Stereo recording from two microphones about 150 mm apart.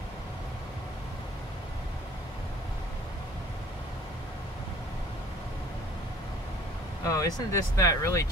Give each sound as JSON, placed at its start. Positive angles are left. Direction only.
{"t": 7.1, "sound": "speech", "side_deg": 25}